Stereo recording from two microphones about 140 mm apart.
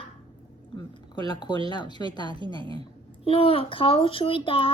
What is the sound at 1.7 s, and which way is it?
Speech, 30° left (ahead or behind).